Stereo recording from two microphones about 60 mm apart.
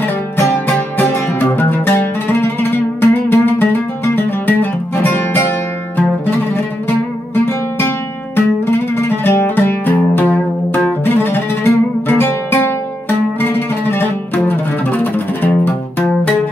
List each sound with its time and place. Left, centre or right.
0.0 s music: left
7.3 s music: left